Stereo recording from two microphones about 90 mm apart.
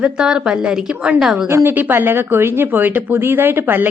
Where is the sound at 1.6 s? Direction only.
20° right (ahead or behind).